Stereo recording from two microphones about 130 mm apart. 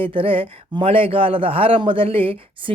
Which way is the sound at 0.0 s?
45° right (ahead or behind).